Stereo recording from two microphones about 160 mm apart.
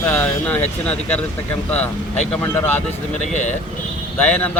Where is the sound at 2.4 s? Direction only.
15° left (ahead or behind).